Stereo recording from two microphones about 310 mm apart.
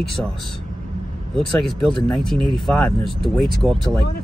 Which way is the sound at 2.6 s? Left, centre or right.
Centre.